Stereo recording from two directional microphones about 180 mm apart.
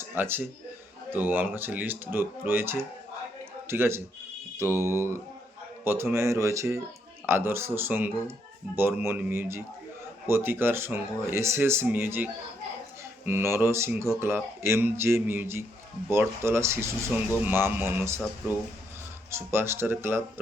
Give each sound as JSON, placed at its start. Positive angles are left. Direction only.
{"t": 0.1, "sound": "speech", "side_deg": -10}
{"t": 19.3, "sound": "speech", "side_deg": -15}